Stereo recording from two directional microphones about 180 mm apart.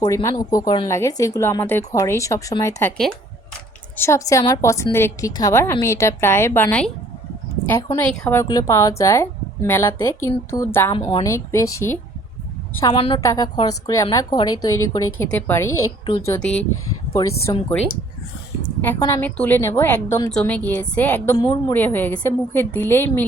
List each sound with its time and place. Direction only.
0.0 s a woman's voice: 15° left (ahead or behind)
3.9 s a woman's voice: 15° left (ahead or behind)
10.9 s a woman's voice: 25° left (ahead or behind)
12.8 s a woman's voice: 30° left (ahead or behind)
18.8 s a woman's voice: 10° left (ahead or behind)